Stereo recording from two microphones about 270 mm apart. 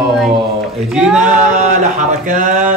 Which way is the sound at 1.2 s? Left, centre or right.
Right.